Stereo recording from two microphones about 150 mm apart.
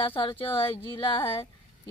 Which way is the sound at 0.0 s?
35° left (ahead or behind).